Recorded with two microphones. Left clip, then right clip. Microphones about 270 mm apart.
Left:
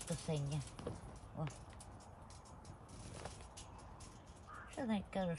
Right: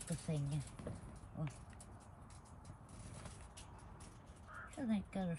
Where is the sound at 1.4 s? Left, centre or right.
Centre.